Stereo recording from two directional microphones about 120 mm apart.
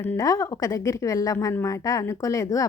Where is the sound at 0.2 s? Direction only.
30° left (ahead or behind).